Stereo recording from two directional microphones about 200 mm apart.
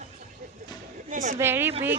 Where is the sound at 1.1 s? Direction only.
40° right (ahead or behind).